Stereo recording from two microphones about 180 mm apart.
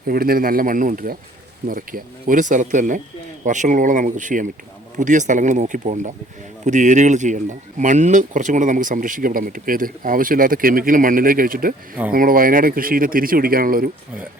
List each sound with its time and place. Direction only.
0.1 s speech: 55° right (ahead or behind)